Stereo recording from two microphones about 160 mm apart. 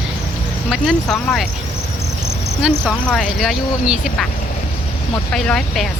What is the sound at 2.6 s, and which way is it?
Speech, 5° left (ahead or behind).